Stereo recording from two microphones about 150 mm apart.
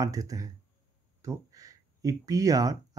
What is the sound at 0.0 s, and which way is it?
Speech, 25° right (ahead or behind).